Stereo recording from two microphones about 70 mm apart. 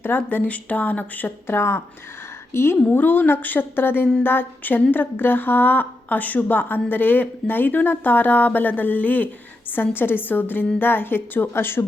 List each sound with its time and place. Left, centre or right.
0.2 s a woman's voice: left